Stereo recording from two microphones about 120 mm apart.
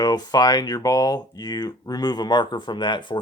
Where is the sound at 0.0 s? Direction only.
35° left (ahead or behind).